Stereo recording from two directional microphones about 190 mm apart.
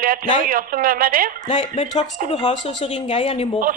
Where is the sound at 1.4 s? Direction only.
40° left (ahead or behind).